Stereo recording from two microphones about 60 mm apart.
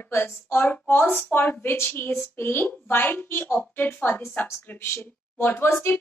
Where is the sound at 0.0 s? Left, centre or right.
Left.